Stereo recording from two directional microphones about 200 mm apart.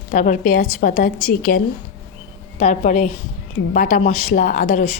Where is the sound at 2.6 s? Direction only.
40° left (ahead or behind).